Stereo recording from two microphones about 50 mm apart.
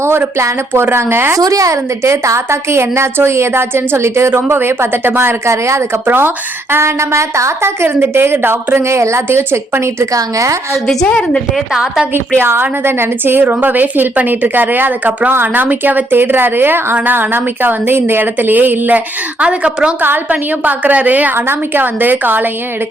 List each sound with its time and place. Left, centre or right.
0.7 s a woman's voice: right
0.9 s a woman's voice: right
4.4 s a woman's voice: right
5.5 s a woman's voice: right
6.1 s a woman's voice: right
8.8 s a woman's voice: right
10.8 s a woman's voice: centre
11.7 s a woman's voice: centre
12.4 s a woman's voice: right
19.4 s a woman's voice: right
20.0 s a woman's voice: right
21.3 s a woman's voice: right